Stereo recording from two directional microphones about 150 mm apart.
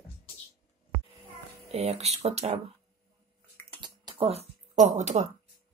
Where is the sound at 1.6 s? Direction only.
45° right (ahead or behind).